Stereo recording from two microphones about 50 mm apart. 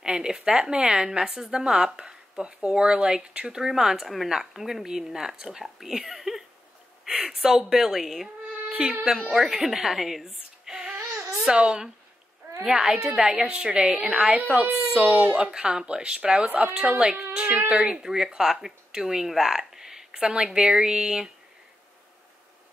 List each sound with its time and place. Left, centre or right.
0.0 s a sound: centre
0.4 s speech: centre
8.7 s speech: right
9.5 s a child's voice: centre
14.4 s speech: right
15.5 s speech: centre
16.4 s a woman's voice: right
18.0 s speech: centre